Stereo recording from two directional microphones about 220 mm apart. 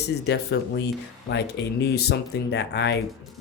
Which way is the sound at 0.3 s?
50° left (ahead or behind).